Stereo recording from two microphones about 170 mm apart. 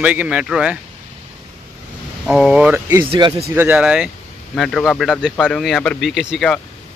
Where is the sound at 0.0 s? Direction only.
10° right (ahead or behind).